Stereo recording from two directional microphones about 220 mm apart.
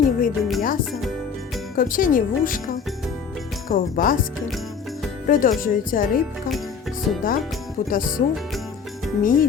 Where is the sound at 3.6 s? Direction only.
40° left (ahead or behind).